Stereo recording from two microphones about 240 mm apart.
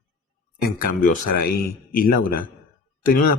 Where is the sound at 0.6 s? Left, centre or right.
Left.